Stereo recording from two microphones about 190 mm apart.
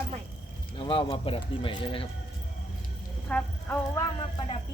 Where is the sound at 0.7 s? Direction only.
25° left (ahead or behind).